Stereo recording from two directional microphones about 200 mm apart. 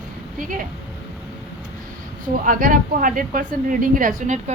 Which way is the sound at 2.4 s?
45° right (ahead or behind).